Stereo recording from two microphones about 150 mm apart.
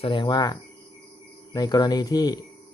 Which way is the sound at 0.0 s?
35° left (ahead or behind).